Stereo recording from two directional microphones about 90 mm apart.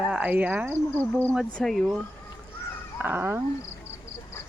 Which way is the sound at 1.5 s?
Centre (ahead or behind).